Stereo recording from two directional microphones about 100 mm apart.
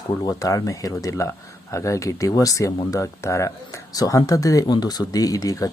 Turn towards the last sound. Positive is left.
turn(degrees=35)  # may be behind; listen again after turning